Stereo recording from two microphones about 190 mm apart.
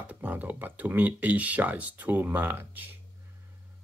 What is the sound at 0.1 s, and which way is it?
Speech, 10° right (ahead or behind).